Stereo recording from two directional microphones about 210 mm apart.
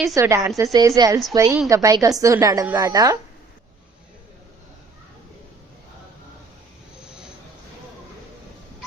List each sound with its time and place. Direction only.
0.1 s a woman's voice: 15° right (ahead or behind)